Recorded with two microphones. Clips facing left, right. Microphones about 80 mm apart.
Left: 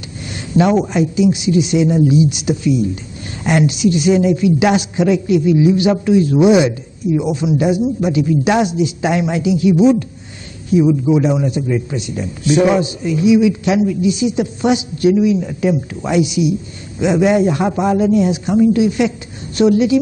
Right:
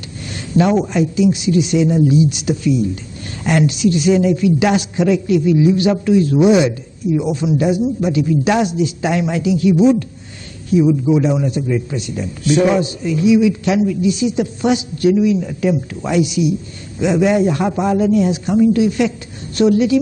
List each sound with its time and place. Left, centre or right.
0.3 s a man's voice: centre